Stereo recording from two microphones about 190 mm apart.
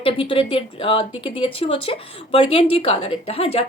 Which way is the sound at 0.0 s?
30° left (ahead or behind).